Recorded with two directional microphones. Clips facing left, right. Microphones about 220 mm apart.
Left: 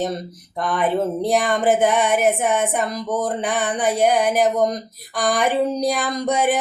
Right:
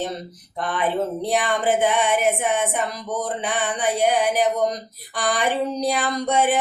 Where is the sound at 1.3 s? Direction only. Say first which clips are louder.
Left 3 dB; 45° left (ahead or behind).